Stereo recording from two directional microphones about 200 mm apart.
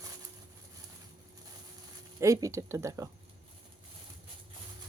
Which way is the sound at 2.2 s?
15° right (ahead or behind).